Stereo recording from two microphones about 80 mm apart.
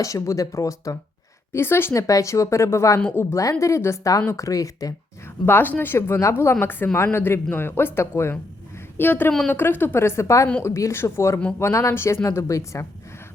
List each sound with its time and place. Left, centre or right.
0.0 s speech: left
1.5 s a woman's voice: left
5.5 s a woman's voice: left